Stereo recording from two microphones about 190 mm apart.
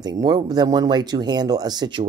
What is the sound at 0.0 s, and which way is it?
Speech, 20° right (ahead or behind).